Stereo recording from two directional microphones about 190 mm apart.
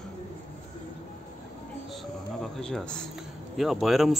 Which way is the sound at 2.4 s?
Centre (ahead or behind).